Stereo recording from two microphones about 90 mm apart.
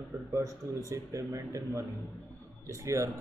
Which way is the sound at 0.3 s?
40° right (ahead or behind).